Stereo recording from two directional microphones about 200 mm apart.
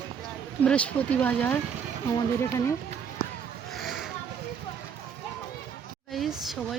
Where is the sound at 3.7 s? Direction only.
Centre (ahead or behind).